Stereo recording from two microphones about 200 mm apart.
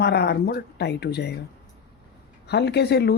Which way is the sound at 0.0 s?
55° left (ahead or behind).